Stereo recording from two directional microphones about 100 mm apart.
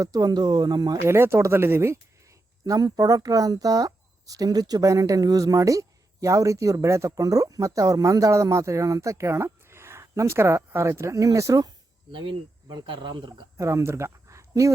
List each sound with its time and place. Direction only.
0.0 s speech: 40° right (ahead or behind)
1.0 s speech: 25° right (ahead or behind)
12.1 s speech: 55° right (ahead or behind)
13.6 s speech: 30° right (ahead or behind)